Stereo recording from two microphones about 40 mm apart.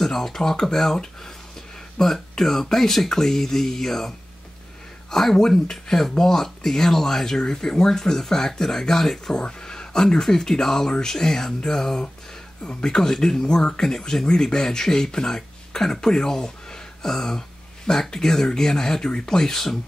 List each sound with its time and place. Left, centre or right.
0.0 s speech: centre
5.1 s speech: centre